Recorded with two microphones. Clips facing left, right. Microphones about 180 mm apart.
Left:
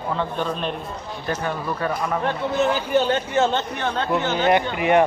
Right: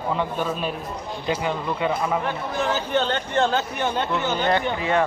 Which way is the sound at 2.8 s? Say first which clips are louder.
Left 3 dB; 10° left (ahead or behind).